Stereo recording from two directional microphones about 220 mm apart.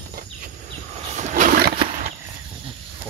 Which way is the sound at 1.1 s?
35° right (ahead or behind).